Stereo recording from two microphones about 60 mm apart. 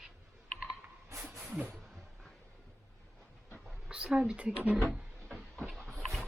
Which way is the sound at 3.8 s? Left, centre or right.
Centre.